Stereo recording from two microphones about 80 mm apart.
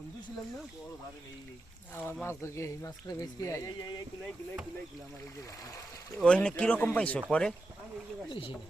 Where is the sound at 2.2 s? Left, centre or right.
Left.